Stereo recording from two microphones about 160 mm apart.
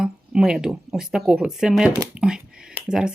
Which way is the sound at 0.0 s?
5° right (ahead or behind).